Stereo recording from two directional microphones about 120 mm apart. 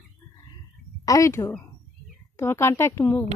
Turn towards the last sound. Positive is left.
turn(degrees=20)  # may be behind; listen again after turning